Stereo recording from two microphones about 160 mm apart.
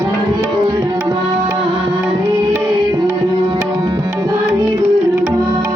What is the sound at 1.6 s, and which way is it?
Music, 30° right (ahead or behind).